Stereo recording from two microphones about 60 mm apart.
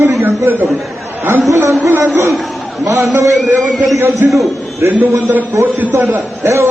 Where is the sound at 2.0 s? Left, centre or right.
Right.